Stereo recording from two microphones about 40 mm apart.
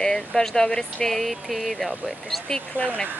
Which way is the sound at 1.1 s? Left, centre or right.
Centre.